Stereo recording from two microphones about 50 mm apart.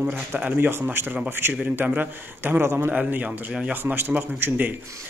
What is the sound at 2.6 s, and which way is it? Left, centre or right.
Speech, right.